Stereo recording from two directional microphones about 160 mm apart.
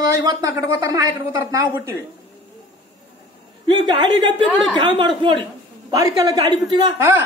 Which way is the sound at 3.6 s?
30° right (ahead or behind).